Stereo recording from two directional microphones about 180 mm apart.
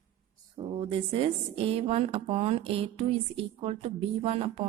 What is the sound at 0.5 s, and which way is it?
Speech, 30° right (ahead or behind).